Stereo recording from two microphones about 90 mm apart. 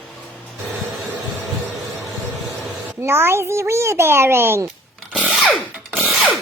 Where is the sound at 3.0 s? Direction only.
25° right (ahead or behind).